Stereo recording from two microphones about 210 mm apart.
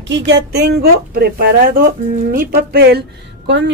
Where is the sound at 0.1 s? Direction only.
55° right (ahead or behind).